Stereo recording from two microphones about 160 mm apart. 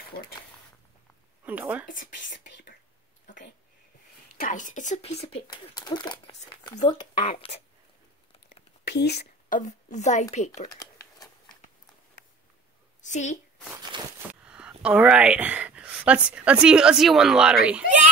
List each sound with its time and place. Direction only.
0.1 s speech: 75° left (ahead or behind)
1.4 s speech: 10° right (ahead or behind)
1.9 s speech: 60° left (ahead or behind); by 2.7 s 80° left
4.4 s speech: 50° left (ahead or behind); by 7.2 s 30° left (ahead or behind)
8.5 s a sound: 90° left
9.6 s a woman's voice: 50° left (ahead or behind)
13.0 s a woman's voice: 50° left (ahead or behind)
14.4 s a sound: 5° right (ahead or behind)
16.3 s speech: 5° right (ahead or behind)